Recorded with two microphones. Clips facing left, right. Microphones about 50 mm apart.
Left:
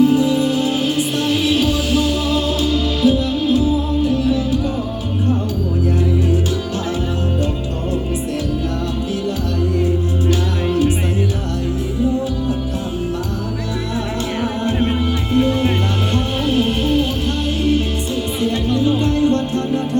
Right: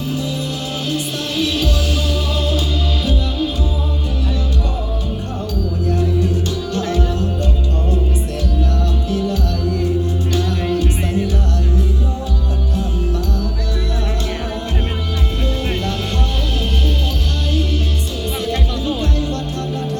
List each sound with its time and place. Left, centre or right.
0.0 s music: centre
16.1 s music: left
18.4 s music: left